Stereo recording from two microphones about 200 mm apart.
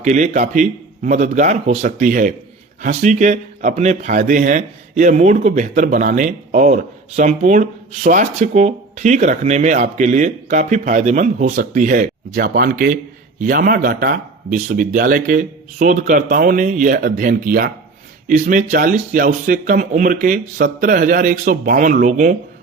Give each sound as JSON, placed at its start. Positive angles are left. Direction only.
{"t": 0.0, "sound": "a man's voice", "side_deg": -35}